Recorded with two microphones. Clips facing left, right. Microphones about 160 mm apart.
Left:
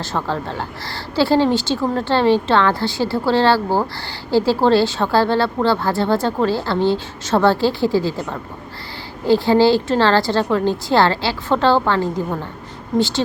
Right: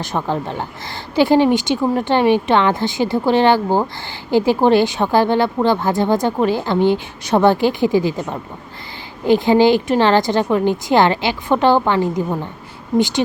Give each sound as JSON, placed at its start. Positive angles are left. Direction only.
{"t": 0.0, "sound": "a woman's voice", "side_deg": -15}